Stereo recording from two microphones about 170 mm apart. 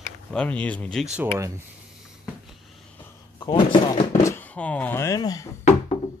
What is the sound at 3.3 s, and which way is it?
Speech, 25° left (ahead or behind).